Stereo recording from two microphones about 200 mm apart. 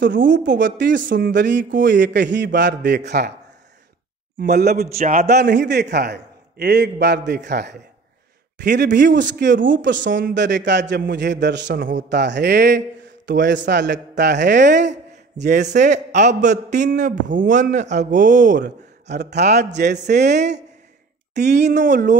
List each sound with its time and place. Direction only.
0.1 s speech: 45° right (ahead or behind)
0.6 s a man's voice: 60° right (ahead or behind)
4.4 s speech: 50° right (ahead or behind)
4.9 s a man's voice: 35° right (ahead or behind)
5.3 s a man's voice: 55° right (ahead or behind)
14.9 s a sound: 40° right (ahead or behind)
15.7 s a man's voice: 35° right (ahead or behind)
18.6 s a man's voice: 55° right (ahead or behind)